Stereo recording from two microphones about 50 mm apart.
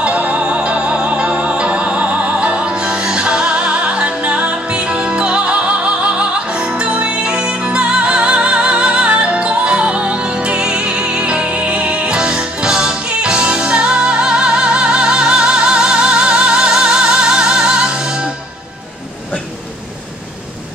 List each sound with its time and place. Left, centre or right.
0.0 s music: right